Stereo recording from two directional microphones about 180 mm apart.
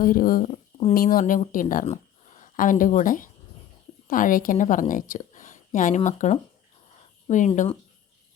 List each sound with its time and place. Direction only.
0.0 s speech: 50° left (ahead or behind)
0.9 s a woman's voice: 50° left (ahead or behind)